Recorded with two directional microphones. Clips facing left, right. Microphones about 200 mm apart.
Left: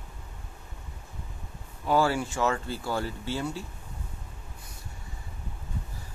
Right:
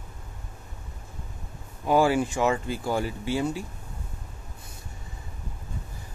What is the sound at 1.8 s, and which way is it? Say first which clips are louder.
Speech: right 4 dB; 15° right (ahead or behind).